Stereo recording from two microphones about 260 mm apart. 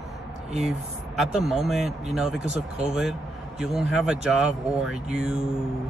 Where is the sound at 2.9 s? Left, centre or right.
Centre.